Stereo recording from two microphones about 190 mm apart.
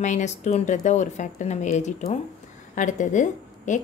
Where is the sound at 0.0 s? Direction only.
40° left (ahead or behind).